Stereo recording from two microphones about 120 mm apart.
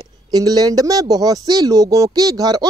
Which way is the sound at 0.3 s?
30° right (ahead or behind).